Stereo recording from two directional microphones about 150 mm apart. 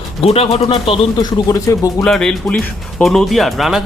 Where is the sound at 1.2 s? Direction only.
25° left (ahead or behind).